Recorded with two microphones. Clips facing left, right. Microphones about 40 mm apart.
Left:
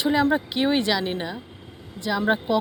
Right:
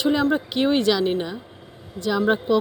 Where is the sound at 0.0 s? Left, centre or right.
Centre.